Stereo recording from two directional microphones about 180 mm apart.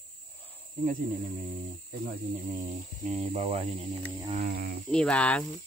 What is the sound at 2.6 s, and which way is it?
Speech, 40° right (ahead or behind).